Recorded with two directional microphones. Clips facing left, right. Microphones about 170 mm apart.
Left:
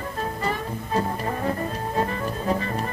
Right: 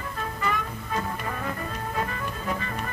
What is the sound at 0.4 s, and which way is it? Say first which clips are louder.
Music: left 2 dB; 35° left (ahead or behind).